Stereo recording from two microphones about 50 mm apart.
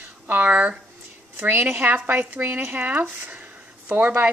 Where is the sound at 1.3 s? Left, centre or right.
Right.